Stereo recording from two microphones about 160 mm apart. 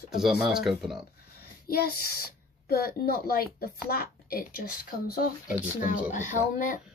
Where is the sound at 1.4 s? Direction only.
70° left (ahead or behind).